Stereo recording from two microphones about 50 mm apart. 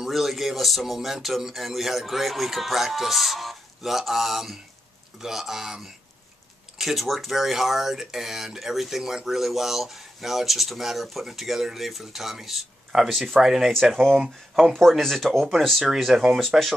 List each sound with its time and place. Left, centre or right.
0.0 s speech: centre
15.9 s speech: centre
16.3 s speech: centre